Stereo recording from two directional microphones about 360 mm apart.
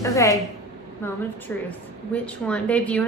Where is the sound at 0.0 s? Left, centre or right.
Centre.